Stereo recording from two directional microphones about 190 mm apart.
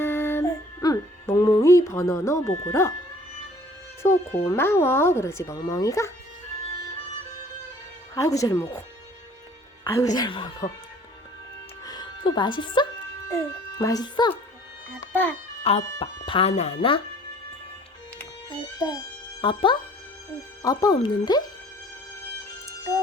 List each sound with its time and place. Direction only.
0.0 s music: 10° left (ahead or behind)
4.0 s speech: 15° left (ahead or behind)
8.1 s speech: 15° left (ahead or behind)
9.8 s speech: 20° left (ahead or behind)
11.9 s speech: 25° left (ahead or behind)
15.1 s a child's voice: 10° left (ahead or behind)
15.6 s speech: 30° left (ahead or behind)
19.4 s speech: 25° left (ahead or behind)